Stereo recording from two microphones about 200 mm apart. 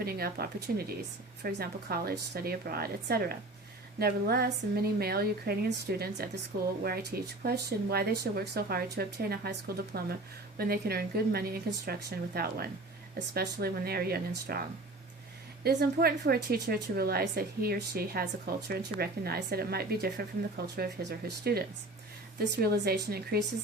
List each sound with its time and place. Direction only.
0.0 s speech: 50° right (ahead or behind)
15.6 s speech: 50° right (ahead or behind)